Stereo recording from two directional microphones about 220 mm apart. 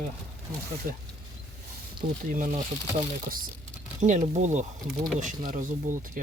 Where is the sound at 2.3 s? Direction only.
35° right (ahead or behind).